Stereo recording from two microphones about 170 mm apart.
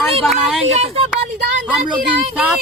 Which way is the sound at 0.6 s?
40° right (ahead or behind).